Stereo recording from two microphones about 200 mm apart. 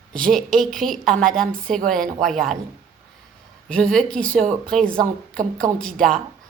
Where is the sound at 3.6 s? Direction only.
5° left (ahead or behind).